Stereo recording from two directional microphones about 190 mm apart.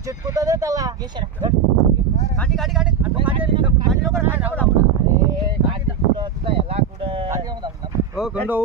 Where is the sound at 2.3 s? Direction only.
5° left (ahead or behind).